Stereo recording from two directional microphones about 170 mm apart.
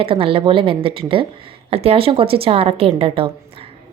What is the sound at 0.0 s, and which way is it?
Speech, 35° right (ahead or behind).